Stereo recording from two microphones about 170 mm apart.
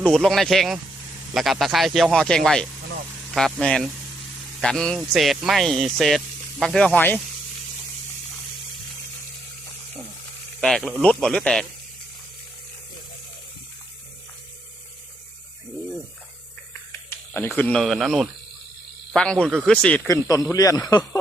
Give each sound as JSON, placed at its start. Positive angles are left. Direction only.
{"t": 0.0, "sound": "speech", "side_deg": 0}
{"t": 10.6, "sound": "speech", "side_deg": 0}
{"t": 17.1, "sound": "a sound", "side_deg": 15}
{"t": 17.6, "sound": "speech", "side_deg": 5}
{"t": 20.1, "sound": "speech", "side_deg": 20}